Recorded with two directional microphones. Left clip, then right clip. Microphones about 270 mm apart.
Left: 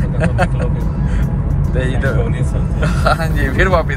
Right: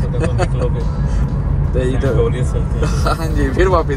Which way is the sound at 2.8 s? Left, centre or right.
Centre.